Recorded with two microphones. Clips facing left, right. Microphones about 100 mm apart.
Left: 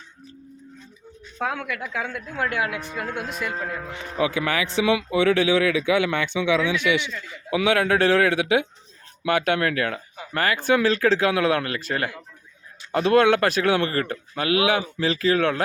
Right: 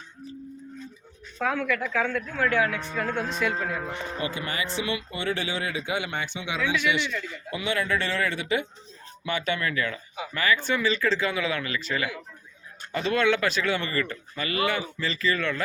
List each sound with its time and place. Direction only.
1.4 s speech: 25° left (ahead or behind); by 3.8 s centre (ahead or behind)
4.2 s speech: 80° left
7.5 s a man's voice: 90° left; by 8.6 s 75° left (ahead or behind)
9.2 s speech: 60° left (ahead or behind)
10.8 s speech: 70° left (ahead or behind); by 12.1 s 50° left (ahead or behind)
12.9 s speech: 65° left (ahead or behind)